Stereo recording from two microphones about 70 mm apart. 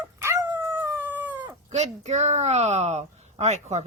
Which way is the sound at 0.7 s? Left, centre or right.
Right.